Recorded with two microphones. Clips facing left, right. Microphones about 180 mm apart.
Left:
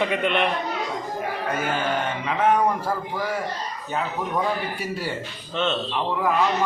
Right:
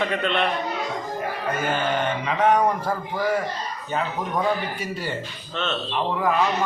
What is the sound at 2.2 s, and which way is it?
Speech, 5° left (ahead or behind).